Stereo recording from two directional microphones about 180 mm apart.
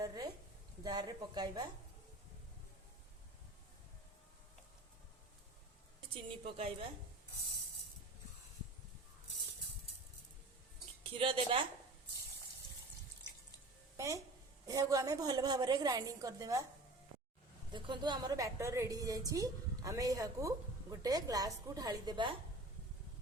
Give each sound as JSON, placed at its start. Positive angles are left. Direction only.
{"t": 0.0, "sound": "a sound", "side_deg": -20}
{"t": 0.9, "sound": "a woman's voice", "side_deg": -25}
{"t": 6.4, "sound": "a woman's voice", "side_deg": -30}
{"t": 11.1, "sound": "a woman's voice", "side_deg": -30}
{"t": 13.9, "sound": "a sound", "side_deg": -20}
{"t": 14.7, "sound": "a woman's voice", "side_deg": -20}
{"t": 17.7, "sound": "a woman's voice", "side_deg": -25}